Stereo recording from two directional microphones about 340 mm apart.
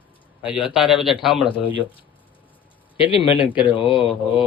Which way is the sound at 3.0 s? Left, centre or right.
Centre.